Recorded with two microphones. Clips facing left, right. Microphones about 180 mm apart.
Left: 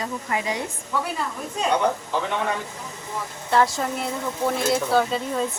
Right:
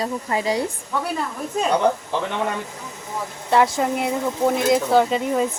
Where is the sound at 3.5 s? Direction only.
15° right (ahead or behind).